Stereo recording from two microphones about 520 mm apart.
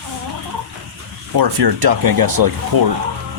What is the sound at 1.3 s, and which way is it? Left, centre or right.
Speech, right.